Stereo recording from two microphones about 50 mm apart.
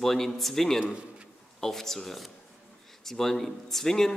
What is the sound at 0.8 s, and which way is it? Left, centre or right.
Speech, centre.